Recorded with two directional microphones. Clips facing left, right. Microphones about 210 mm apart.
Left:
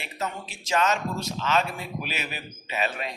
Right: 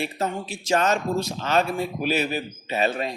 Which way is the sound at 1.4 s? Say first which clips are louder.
Right 3 dB; 35° right (ahead or behind).